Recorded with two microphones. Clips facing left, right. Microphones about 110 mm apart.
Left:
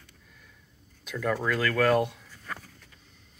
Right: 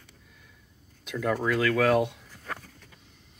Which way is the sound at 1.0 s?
15° right (ahead or behind).